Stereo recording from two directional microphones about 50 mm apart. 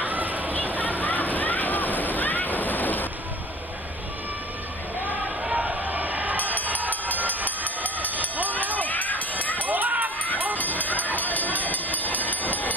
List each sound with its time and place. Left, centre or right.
0.0 s a sound: right
0.7 s slosh: left
5.6 s a sound: right
6.7 s music: right
7.8 s a sound: left
8.7 s crowd: left
9.4 s run: left
9.7 s run: right
10.6 s music: left